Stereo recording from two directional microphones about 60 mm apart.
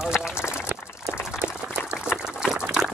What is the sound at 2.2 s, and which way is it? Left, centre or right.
Liquid, centre.